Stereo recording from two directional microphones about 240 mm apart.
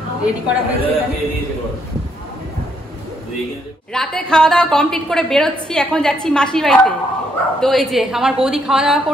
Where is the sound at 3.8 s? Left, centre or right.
Centre.